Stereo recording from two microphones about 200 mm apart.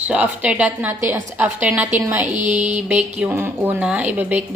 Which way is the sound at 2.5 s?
35° right (ahead or behind).